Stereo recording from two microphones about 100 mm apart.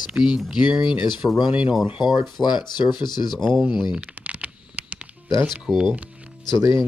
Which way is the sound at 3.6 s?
5° right (ahead or behind).